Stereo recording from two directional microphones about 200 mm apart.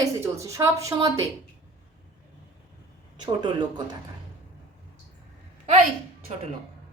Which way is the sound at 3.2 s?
20° right (ahead or behind).